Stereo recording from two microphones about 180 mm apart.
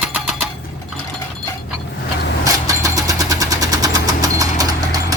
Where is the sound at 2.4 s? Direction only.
20° right (ahead or behind).